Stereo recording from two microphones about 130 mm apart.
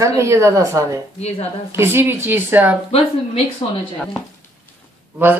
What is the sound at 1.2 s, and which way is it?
Speech, 55° left (ahead or behind).